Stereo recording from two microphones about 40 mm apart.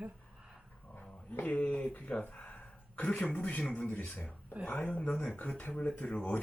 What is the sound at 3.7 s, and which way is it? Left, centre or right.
Speech, left.